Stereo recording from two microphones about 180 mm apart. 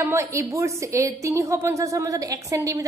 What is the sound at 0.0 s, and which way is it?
A woman's voice, 15° right (ahead or behind).